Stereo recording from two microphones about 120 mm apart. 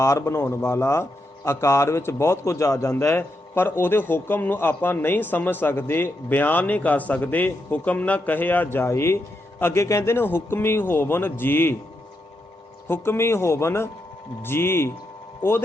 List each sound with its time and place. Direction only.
0.0 s a man's voice: 25° left (ahead or behind)
12.9 s a man's voice: 20° left (ahead or behind)